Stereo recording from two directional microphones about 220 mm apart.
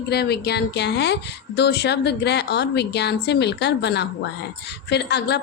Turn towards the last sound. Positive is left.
turn(degrees=50)  # may be behind; listen again after turning